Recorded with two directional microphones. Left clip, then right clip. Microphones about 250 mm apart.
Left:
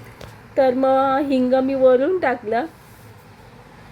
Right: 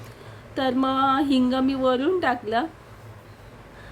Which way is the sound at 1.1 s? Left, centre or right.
Right.